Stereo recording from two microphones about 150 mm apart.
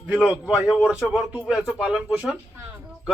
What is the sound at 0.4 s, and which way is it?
A man's voice, 5° right (ahead or behind).